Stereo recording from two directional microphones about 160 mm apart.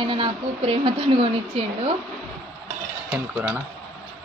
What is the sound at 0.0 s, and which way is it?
A woman's voice, 30° right (ahead or behind).